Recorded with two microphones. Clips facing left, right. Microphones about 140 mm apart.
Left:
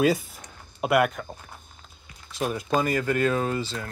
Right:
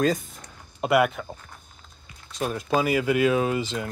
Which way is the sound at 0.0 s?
5° left (ahead or behind).